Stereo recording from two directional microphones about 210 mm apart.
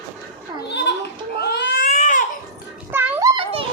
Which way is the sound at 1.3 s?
50° left (ahead or behind).